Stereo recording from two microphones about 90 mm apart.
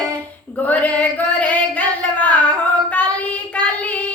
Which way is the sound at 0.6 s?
15° left (ahead or behind).